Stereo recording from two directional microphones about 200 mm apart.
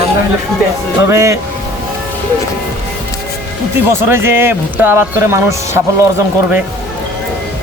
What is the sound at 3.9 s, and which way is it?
Speech, 10° right (ahead or behind).